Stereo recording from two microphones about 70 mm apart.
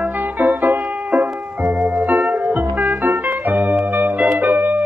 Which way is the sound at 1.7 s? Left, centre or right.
Centre.